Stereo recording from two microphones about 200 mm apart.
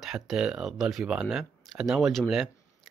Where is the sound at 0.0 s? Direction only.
Centre (ahead or behind).